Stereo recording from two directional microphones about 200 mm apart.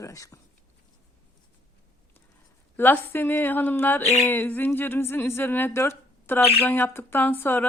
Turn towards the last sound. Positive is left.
turn(degrees=10)  # may be behind; listen again after turning